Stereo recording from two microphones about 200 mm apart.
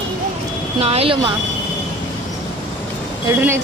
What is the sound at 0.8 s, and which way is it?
Speech, 30° right (ahead or behind).